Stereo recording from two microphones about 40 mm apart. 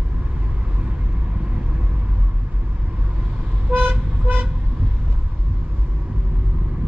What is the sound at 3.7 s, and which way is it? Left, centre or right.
Toot, right.